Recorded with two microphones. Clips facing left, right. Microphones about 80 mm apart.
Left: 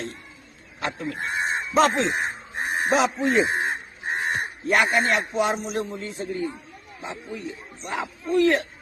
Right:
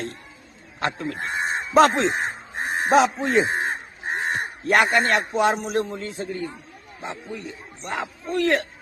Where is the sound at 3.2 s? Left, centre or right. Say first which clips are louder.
Even; right.